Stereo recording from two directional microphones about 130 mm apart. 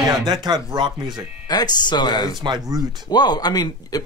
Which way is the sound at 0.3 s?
35° right (ahead or behind).